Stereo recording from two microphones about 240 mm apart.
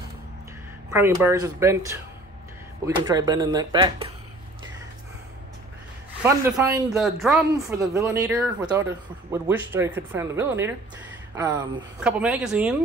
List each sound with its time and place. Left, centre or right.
0.8 s speech: centre
3.0 s speech: centre
6.2 s speech: centre
7.5 s speech: centre